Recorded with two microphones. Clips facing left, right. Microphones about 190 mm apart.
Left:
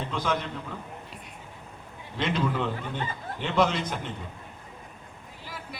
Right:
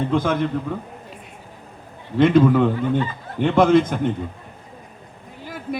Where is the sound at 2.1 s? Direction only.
55° right (ahead or behind).